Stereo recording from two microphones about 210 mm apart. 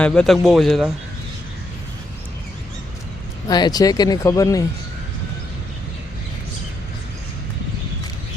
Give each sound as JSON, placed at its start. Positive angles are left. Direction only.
{"t": 0.0, "sound": "a man's voice", "side_deg": 5}
{"t": 3.5, "sound": "speech", "side_deg": 20}